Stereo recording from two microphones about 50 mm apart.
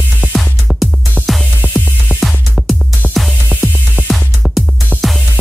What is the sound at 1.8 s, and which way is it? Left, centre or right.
Music, left.